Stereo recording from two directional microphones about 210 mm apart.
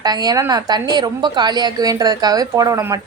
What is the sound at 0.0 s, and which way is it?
A woman's voice, 20° right (ahead or behind).